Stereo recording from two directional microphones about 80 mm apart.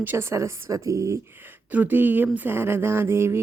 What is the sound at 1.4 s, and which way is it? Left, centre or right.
Speech, right.